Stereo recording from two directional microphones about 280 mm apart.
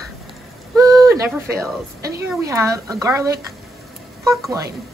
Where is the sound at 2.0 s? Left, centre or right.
Centre.